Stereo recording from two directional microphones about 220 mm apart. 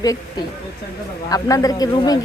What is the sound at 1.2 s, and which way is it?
Speech, 15° left (ahead or behind).